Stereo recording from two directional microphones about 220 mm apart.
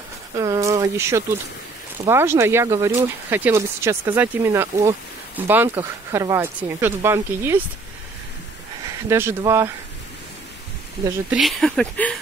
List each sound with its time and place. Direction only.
0.4 s a sound: 15° right (ahead or behind)
2.0 s speech: 10° right (ahead or behind)
9.1 s speech: 10° right (ahead or behind)
11.1 s speech: 5° right (ahead or behind)